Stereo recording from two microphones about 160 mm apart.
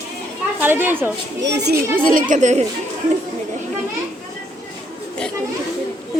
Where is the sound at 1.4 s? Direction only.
90° right.